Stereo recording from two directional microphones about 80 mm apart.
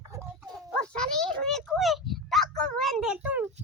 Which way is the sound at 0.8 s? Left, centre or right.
Centre.